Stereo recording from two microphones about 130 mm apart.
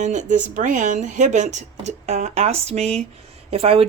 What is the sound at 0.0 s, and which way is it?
Speech, 70° right (ahead or behind).